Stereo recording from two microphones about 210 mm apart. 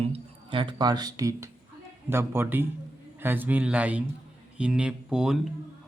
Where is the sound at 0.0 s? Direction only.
25° right (ahead or behind).